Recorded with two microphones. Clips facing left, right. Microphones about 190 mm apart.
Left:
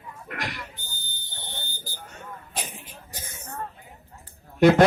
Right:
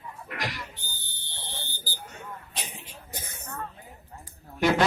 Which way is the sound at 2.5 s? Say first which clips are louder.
Left 9 dB; 50° left (ahead or behind).